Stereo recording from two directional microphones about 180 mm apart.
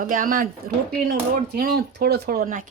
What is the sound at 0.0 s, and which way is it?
Speech, 50° right (ahead or behind).